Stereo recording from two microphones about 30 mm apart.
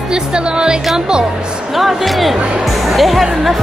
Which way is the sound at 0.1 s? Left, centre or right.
Right.